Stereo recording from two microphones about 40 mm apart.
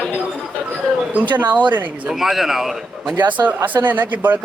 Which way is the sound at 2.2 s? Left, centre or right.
Centre.